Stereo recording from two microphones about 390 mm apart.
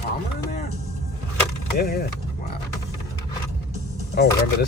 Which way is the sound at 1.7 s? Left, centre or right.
Left.